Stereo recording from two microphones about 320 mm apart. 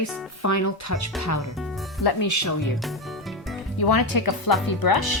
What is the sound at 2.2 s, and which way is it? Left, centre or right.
Speech, left.